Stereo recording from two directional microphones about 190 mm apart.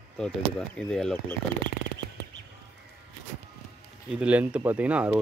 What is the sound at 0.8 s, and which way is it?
Speech, 5° left (ahead or behind).